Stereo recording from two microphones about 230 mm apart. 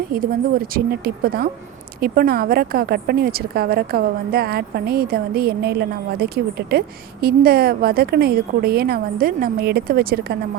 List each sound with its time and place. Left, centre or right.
0.1 s a woman's voice: right